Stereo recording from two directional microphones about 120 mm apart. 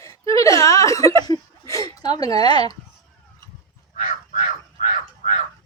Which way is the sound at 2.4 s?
35° left (ahead or behind).